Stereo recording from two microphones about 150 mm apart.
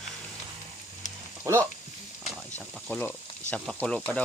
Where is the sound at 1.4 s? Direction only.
15° right (ahead or behind).